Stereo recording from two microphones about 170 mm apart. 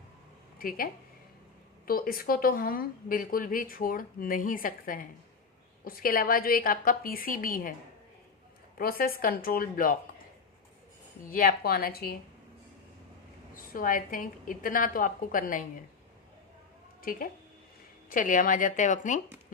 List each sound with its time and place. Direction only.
0.6 s speech: 55° left (ahead or behind)
1.9 s a woman's voice: 60° left (ahead or behind)
8.8 s a woman's voice: 60° left (ahead or behind)
11.3 s a woman's voice: 60° left (ahead or behind)
13.7 s a woman's voice: 55° left (ahead or behind)
17.0 s a woman's voice: 55° left (ahead or behind)